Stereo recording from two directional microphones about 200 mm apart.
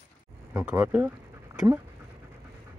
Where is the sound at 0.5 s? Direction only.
10° right (ahead or behind).